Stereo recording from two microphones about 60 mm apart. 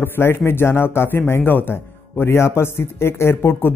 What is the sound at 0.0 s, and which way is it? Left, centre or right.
A man's voice, left.